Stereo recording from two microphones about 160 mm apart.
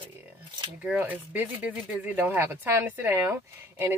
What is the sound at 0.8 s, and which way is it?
Speech, 10° right (ahead or behind).